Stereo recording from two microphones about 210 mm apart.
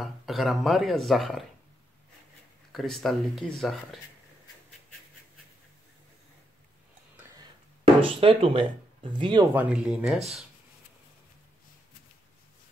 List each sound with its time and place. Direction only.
0.0 s speech: centre (ahead or behind)
2.7 s speech: centre (ahead or behind)
8.0 s speech: 25° right (ahead or behind)
9.6 s speech: 5° right (ahead or behind)